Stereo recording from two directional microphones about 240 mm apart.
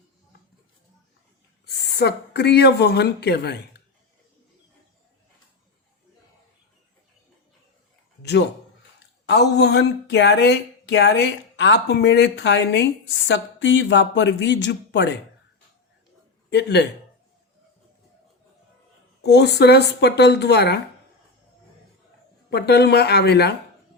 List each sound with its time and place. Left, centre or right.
1.6 s speech: left
8.2 s a man's voice: left
16.5 s speech: left
19.2 s speech: left
22.4 s speech: left